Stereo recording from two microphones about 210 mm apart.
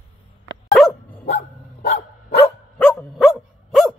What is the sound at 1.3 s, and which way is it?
Dog, 50° left (ahead or behind).